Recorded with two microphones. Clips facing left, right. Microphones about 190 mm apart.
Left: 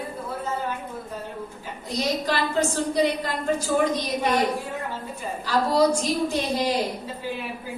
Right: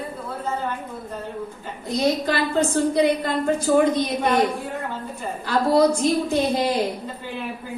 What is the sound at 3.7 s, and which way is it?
Speech, 50° right (ahead or behind).